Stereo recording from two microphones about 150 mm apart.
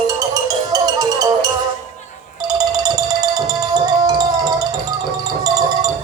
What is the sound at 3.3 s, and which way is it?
Music, 25° right (ahead or behind).